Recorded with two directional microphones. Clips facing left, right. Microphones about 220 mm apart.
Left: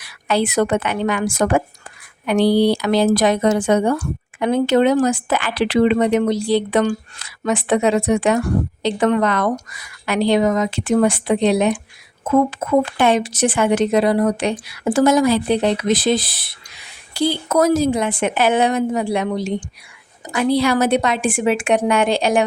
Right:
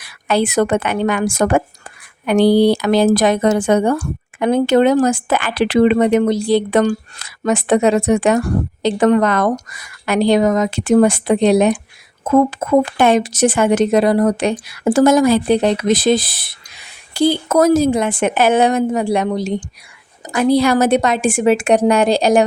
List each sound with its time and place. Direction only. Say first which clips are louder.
0.0 s a woman's voice: right 2 dB; 50° right (ahead or behind)